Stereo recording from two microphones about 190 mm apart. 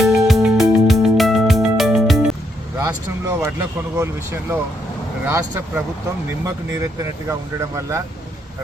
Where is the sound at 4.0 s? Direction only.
15° right (ahead or behind).